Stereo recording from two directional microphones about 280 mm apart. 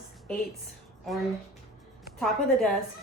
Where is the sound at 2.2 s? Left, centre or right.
Centre.